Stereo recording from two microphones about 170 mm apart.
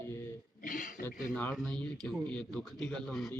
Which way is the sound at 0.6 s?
50° left (ahead or behind).